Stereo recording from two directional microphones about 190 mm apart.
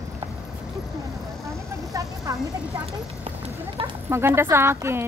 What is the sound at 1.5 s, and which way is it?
Vehicle, 15° right (ahead or behind).